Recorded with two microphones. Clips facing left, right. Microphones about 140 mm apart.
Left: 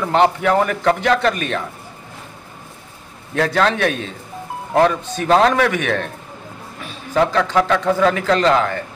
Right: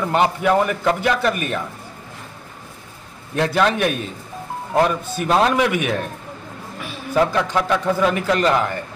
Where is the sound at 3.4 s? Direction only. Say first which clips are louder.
Left 1 dB; 10° right (ahead or behind).